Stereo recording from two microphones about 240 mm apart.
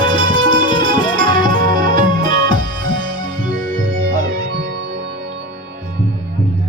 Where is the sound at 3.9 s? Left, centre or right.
Right.